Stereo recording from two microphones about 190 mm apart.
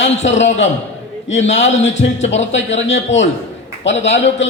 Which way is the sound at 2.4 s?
75° left (ahead or behind).